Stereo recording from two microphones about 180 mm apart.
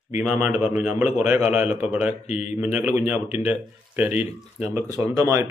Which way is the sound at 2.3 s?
35° left (ahead or behind).